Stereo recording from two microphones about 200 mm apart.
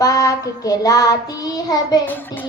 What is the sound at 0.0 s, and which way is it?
Child singing, 15° left (ahead or behind).